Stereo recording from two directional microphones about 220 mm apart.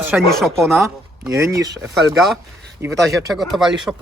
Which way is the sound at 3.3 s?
Centre (ahead or behind).